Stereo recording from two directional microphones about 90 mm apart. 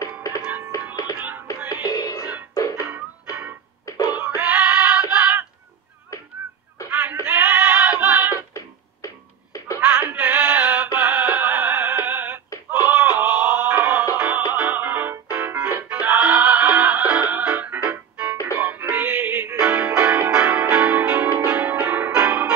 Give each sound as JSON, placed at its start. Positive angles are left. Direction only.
{"t": 0.0, "sound": "music", "side_deg": 40}
{"t": 1.9, "sound": "music", "side_deg": 45}
{"t": 4.4, "sound": "music", "side_deg": -15}
{"t": 5.1, "sound": "a sound", "side_deg": -15}
{"t": 6.9, "sound": "synthetic singing", "side_deg": -20}
{"t": 7.2, "sound": "goat", "side_deg": -15}
{"t": 8.5, "sound": "cat", "side_deg": 35}
{"t": 9.8, "sound": "music", "side_deg": -15}